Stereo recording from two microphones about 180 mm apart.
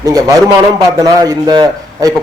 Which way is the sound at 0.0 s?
20° right (ahead or behind).